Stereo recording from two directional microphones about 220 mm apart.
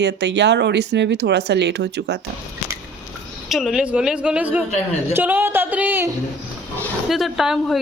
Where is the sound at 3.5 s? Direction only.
Centre (ahead or behind).